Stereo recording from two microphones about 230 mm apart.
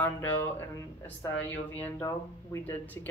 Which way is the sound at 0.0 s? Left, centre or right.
Centre.